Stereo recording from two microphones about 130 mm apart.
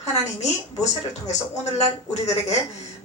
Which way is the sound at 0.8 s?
60° left (ahead or behind).